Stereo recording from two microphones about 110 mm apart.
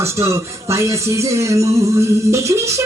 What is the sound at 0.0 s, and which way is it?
Speech, 25° right (ahead or behind).